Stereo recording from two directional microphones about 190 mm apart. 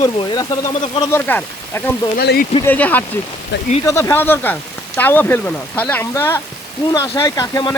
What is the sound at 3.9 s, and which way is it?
Speech, 15° left (ahead or behind).